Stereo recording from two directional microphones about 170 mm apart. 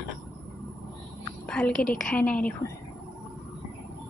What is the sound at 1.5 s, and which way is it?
A woman's voice, 5° left (ahead or behind).